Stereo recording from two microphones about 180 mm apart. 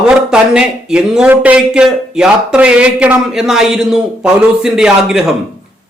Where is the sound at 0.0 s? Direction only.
5° right (ahead or behind).